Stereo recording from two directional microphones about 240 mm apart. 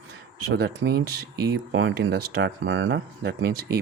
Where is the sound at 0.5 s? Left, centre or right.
Right.